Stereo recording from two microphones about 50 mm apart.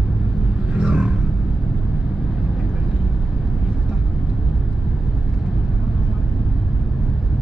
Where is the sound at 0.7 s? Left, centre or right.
Centre.